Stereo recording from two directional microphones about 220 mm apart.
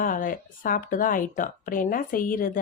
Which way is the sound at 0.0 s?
40° left (ahead or behind).